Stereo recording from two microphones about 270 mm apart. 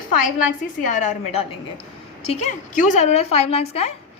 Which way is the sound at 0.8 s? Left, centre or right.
Left.